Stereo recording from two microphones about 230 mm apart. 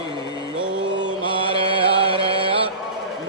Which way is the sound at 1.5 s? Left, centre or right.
Right.